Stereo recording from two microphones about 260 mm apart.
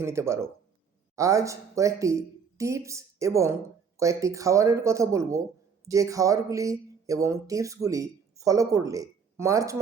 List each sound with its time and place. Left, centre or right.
0.0 s speech: centre